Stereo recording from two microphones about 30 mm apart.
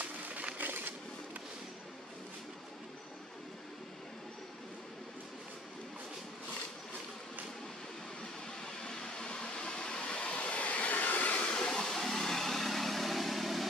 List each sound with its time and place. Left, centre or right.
0.0 s a sound: right
0.6 s shuffling cards: right
8.6 s train: left
11.4 s hair dryer: left
11.7 s vehicle: centre